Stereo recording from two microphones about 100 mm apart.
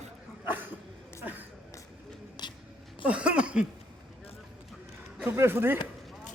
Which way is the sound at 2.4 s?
50° left (ahead or behind).